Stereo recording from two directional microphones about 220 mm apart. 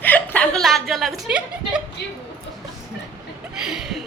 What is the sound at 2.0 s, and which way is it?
Speech, 50° left (ahead or behind).